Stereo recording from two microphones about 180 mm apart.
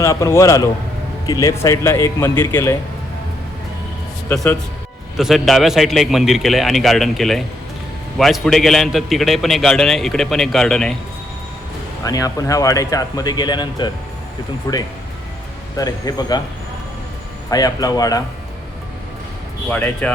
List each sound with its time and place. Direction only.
0.0 s speech: 15° left (ahead or behind)
5.1 s a man's voice: centre (ahead or behind)
12.0 s speech: 20° left (ahead or behind)
17.5 s speech: 20° left (ahead or behind)
19.7 s speech: 10° left (ahead or behind)